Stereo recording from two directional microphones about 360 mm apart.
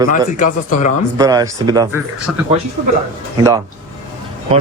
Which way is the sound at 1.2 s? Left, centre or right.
Centre.